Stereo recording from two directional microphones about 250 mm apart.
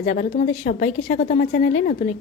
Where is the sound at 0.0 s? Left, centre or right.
Left.